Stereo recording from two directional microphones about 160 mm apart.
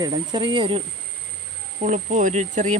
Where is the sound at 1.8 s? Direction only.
50° right (ahead or behind).